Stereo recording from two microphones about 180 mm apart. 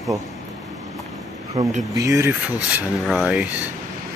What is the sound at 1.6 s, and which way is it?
Speech, 40° right (ahead or behind).